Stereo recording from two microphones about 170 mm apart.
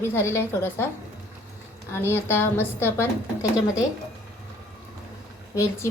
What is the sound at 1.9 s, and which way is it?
A woman's voice, 15° left (ahead or behind).